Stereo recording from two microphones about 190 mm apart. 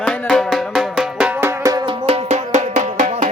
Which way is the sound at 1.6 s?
20° right (ahead or behind).